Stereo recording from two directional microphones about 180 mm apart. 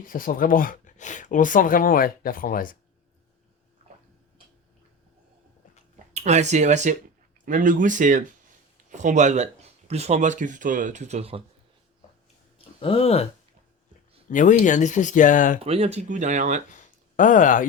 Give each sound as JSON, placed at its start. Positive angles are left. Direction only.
{"t": 0.0, "sound": "speech", "side_deg": 50}
{"t": 6.1, "sound": "speech", "side_deg": -40}
{"t": 12.8, "sound": "speech", "side_deg": 30}
{"t": 14.3, "sound": "speech", "side_deg": 45}
{"t": 15.6, "sound": "speech", "side_deg": -35}
{"t": 16.7, "sound": "a sound", "side_deg": 45}